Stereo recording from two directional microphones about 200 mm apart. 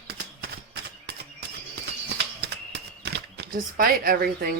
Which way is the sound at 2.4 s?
55° right (ahead or behind).